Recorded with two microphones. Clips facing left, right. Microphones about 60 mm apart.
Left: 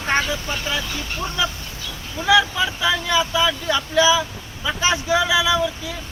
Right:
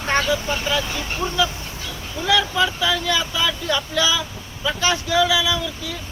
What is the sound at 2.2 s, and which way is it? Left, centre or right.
Speech, centre.